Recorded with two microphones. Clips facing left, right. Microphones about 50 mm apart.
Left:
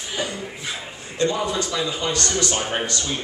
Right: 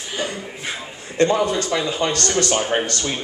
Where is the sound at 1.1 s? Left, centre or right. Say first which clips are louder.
Right 5 dB; right.